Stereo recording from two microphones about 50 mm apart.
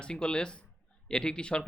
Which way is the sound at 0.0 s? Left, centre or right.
Centre.